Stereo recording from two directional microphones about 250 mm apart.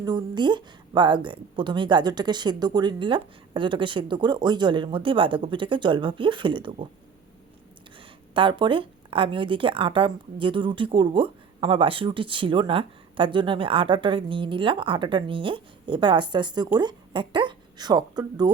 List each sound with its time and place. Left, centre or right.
0.0 s speech: centre
7.9 s speech: centre